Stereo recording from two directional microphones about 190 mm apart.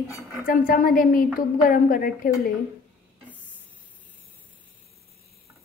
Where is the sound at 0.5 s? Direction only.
45° left (ahead or behind).